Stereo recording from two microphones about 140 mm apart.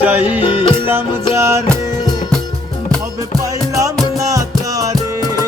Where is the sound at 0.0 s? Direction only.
10° right (ahead or behind).